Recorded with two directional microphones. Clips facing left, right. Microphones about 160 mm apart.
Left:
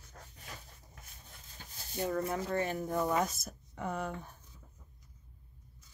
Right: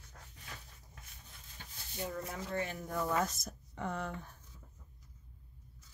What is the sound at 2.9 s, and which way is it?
Speech, 20° left (ahead or behind).